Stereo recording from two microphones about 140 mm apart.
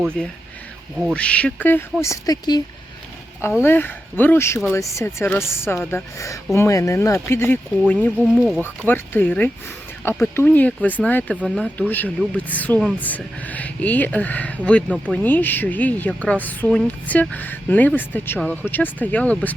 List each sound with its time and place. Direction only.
0.2 s speech: 5° left (ahead or behind); by 2.6 s 25° left (ahead or behind)
3.6 s speech: 15° left (ahead or behind)
8.4 s speech: 5° right (ahead or behind)
8.9 s speech: 15° left (ahead or behind)
11.4 s speech: centre (ahead or behind)
11.8 s speech: 10° left (ahead or behind)
14.8 s speech: 10° right (ahead or behind)
15.1 s speech: 10° left (ahead or behind)